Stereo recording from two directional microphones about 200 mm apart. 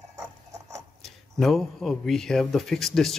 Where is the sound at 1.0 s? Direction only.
Centre (ahead or behind).